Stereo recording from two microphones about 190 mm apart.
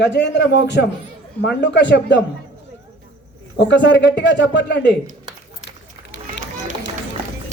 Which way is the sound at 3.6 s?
70° left (ahead or behind).